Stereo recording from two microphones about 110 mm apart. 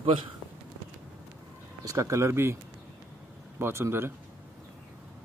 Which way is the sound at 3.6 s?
20° right (ahead or behind).